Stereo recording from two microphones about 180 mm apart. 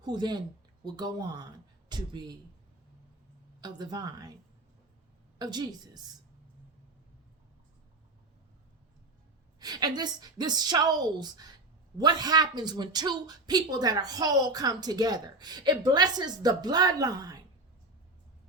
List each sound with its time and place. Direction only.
0.0 s a man's voice: 25° right (ahead or behind)
3.6 s a man's voice: 25° right (ahead or behind)
5.4 s a man's voice: 25° right (ahead or behind)
9.6 s a man's voice: 20° right (ahead or behind)